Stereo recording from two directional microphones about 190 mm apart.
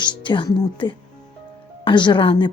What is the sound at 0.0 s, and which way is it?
Speech, 25° left (ahead or behind).